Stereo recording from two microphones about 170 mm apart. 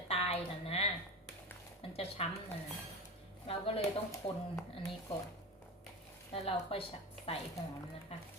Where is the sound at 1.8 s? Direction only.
35° left (ahead or behind).